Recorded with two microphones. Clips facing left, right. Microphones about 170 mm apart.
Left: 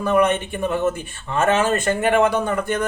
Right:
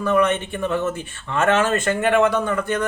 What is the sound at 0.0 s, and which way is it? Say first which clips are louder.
Speech: left 1 dB; 15° left (ahead or behind).